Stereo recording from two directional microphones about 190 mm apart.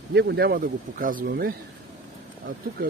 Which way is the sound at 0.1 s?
60° right (ahead or behind).